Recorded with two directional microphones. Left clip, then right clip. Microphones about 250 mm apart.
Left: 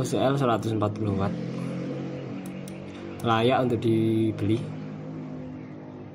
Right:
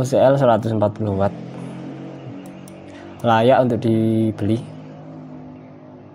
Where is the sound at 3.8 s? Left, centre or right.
Right.